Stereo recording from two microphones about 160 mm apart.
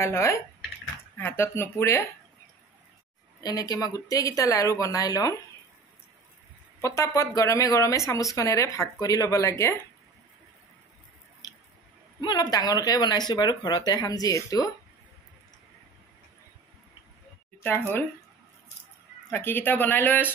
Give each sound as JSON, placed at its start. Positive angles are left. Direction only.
{"t": 0.0, "sound": "speech", "side_deg": 15}
{"t": 3.3, "sound": "speech", "side_deg": 25}
{"t": 6.8, "sound": "speech", "side_deg": 20}
{"t": 12.2, "sound": "speech", "side_deg": 25}
{"t": 17.6, "sound": "speech", "side_deg": 15}
{"t": 19.3, "sound": "speech", "side_deg": 15}